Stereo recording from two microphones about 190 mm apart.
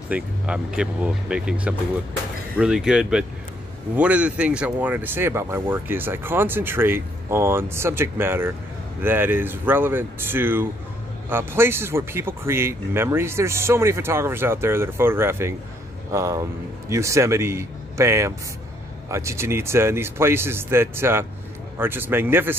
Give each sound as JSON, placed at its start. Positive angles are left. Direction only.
{"t": 0.1, "sound": "speech", "side_deg": -5}